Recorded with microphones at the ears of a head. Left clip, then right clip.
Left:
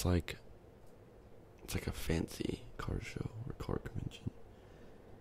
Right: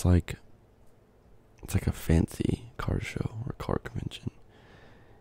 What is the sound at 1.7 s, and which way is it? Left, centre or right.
Speech, right.